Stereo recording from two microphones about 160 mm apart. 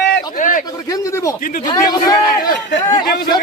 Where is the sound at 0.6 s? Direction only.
20° left (ahead or behind).